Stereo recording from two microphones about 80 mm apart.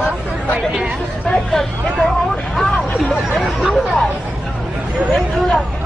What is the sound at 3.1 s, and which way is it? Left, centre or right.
Chatter, centre.